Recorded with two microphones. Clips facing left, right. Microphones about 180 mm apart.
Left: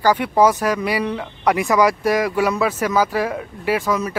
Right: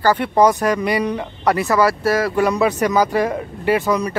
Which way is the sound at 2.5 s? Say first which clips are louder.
Right 3 dB; centre (ahead or behind).